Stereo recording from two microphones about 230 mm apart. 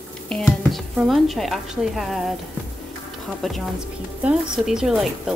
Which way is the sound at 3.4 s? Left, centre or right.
Centre.